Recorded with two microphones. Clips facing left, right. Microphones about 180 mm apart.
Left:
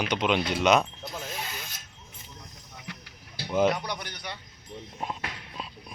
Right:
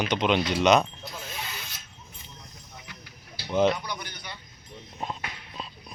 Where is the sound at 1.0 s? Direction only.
50° left (ahead or behind).